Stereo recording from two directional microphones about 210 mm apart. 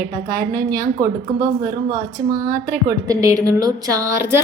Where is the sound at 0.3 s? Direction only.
15° right (ahead or behind).